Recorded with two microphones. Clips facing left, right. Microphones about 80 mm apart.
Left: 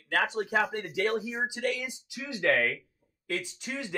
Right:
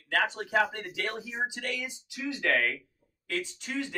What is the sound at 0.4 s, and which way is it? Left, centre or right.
Speech, centre.